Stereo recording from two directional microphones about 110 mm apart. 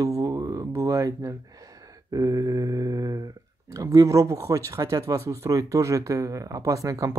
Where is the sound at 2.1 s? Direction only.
30° right (ahead or behind).